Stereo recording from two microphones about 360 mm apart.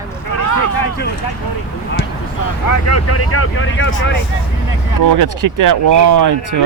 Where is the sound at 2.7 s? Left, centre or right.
Left.